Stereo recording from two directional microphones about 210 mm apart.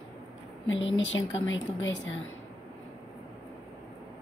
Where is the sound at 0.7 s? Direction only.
65° left (ahead or behind).